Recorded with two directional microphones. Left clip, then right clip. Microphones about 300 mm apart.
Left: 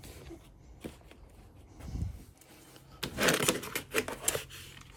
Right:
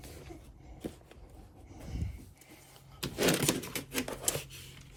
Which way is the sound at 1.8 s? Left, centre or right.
Centre.